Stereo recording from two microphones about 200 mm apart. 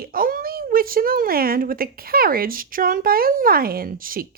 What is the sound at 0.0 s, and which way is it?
Speech, 45° right (ahead or behind).